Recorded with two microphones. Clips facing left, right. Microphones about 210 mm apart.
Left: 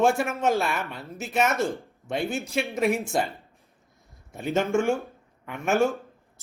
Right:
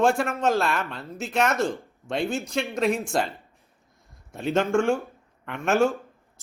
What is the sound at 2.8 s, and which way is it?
Speech, 15° left (ahead or behind).